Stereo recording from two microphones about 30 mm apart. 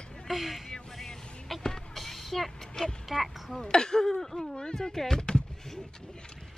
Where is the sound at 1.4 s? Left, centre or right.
Centre.